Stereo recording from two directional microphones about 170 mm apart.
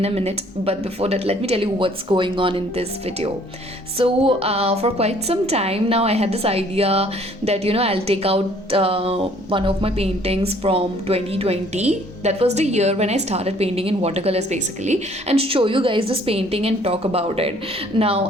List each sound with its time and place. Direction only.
0.0 s a woman's voice: 35° right (ahead or behind)